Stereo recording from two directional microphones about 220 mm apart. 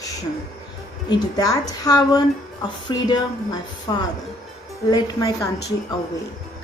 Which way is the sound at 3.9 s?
20° left (ahead or behind).